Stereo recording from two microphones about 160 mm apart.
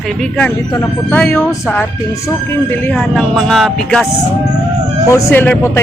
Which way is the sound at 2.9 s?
5° left (ahead or behind).